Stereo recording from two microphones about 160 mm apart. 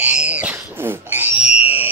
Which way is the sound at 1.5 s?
40° left (ahead or behind).